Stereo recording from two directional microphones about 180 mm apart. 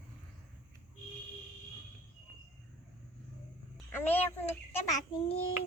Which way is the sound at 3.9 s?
10° left (ahead or behind).